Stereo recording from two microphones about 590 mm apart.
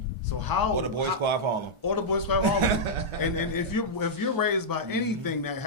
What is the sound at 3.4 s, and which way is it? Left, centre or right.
A man's voice, left.